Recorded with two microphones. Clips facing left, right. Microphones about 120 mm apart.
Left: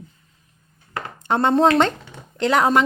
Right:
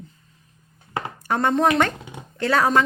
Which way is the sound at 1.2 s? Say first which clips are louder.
Left 3 dB; 20° left (ahead or behind).